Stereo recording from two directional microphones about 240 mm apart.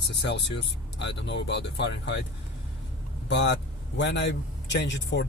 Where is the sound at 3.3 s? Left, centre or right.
Left.